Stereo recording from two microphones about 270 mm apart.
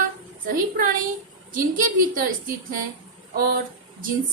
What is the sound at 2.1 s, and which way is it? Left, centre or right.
Speech, right.